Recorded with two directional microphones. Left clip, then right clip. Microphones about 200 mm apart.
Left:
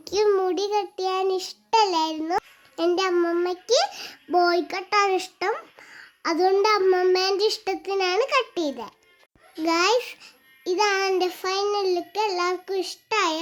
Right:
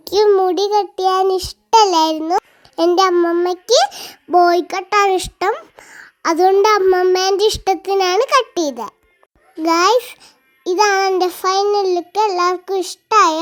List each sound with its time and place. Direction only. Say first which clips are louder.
0.0 s a child's voice: right 9 dB; 30° right (ahead or behind)